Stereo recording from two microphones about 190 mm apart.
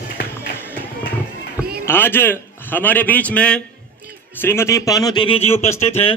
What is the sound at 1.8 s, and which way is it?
A man's voice, 10° left (ahead or behind).